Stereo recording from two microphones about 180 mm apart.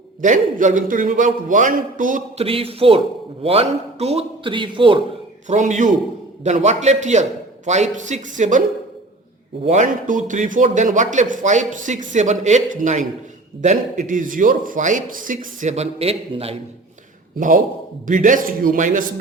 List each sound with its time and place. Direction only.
0.2 s a man's voice: 45° right (ahead or behind)
2.4 s a man's voice: 30° right (ahead or behind)
5.5 s a man's voice: 40° right (ahead or behind)
9.6 s a man's voice: 45° right (ahead or behind)
18.0 s a man's voice: 45° right (ahead or behind)